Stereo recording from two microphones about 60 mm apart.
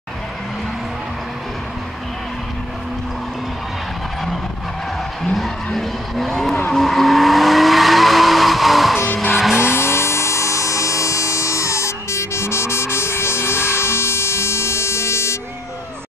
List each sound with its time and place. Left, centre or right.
5.2 s vehicle: centre
9.9 s music: left